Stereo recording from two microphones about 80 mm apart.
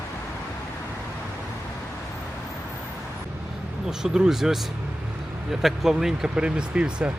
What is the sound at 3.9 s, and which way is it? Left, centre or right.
Speech, centre.